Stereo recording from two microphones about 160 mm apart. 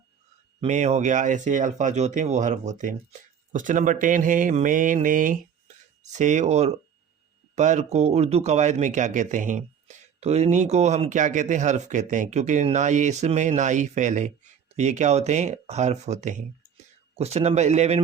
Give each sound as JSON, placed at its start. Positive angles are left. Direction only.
{"t": 0.6, "sound": "speech", "side_deg": -45}